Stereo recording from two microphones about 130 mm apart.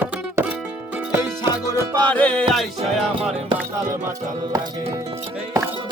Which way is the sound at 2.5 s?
Centre (ahead or behind).